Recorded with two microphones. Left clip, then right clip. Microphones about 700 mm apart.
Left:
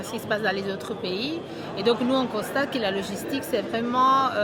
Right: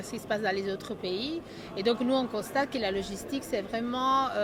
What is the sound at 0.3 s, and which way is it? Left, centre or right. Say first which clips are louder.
A woman's voice: left 4 dB; right.